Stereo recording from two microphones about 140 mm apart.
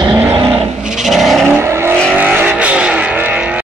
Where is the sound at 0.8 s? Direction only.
Centre (ahead or behind).